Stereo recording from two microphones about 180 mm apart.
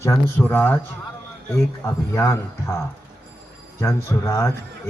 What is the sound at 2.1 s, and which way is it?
A man's voice, 15° left (ahead or behind).